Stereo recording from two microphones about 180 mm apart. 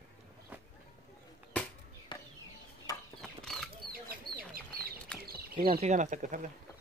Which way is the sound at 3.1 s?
Centre (ahead or behind).